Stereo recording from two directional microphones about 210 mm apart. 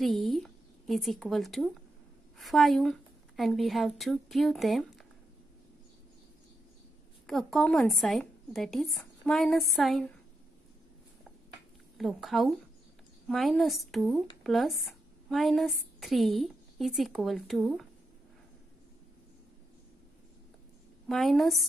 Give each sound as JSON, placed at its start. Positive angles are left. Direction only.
{"t": 0.0, "sound": "a woman's voice", "side_deg": 0}
{"t": 7.2, "sound": "speech", "side_deg": 0}
{"t": 12.0, "sound": "speech", "side_deg": 0}
{"t": 21.1, "sound": "speech", "side_deg": 0}